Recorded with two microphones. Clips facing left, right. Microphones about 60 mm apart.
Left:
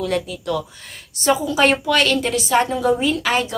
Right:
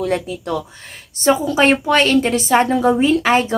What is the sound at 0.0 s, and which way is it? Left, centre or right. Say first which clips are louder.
A woman's voice: right 2 dB; right.